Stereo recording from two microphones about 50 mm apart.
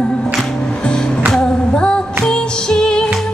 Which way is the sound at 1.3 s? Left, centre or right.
Centre.